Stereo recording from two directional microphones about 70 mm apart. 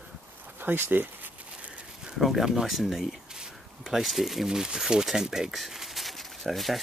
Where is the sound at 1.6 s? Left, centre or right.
Centre.